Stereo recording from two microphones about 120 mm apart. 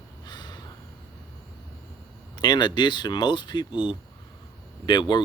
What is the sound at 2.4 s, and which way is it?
Speech, 35° left (ahead or behind).